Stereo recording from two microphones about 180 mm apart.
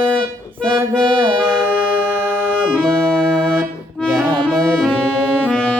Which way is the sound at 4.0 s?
5° left (ahead or behind).